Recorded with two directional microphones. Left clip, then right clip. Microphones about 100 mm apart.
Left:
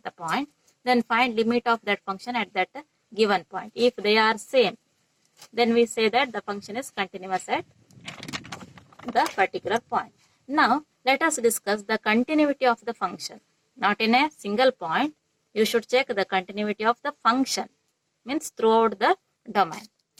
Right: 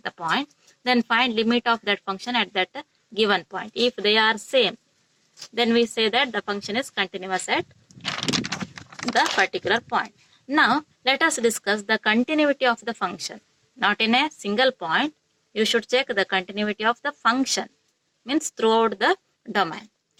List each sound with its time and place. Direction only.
0.0 s speech: 20° right (ahead or behind)
8.3 s clip-clop: 15° right (ahead or behind)
8.8 s a sound: 15° right (ahead or behind)
9.4 s speech: 30° right (ahead or behind)